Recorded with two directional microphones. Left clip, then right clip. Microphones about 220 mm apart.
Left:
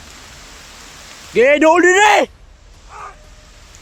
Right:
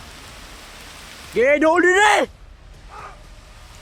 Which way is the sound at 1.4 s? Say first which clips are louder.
Left 5 dB; 20° left (ahead or behind).